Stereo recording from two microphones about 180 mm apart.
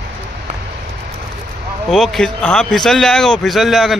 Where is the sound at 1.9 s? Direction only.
Centre (ahead or behind).